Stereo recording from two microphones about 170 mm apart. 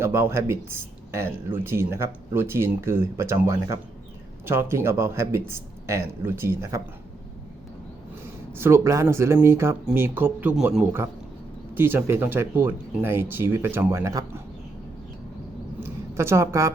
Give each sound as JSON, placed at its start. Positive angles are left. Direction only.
{"t": 0.0, "sound": "speech", "side_deg": -15}
{"t": 8.5, "sound": "speech", "side_deg": -15}
{"t": 15.8, "sound": "a sound", "side_deg": -15}